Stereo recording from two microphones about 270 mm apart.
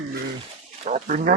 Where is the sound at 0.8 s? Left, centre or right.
Right.